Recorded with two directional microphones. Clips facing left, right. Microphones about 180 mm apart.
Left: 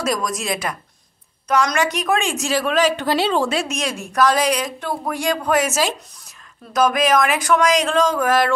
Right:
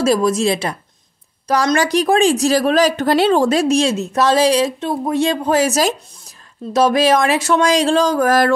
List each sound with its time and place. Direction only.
0.0 s speech: 30° right (ahead or behind)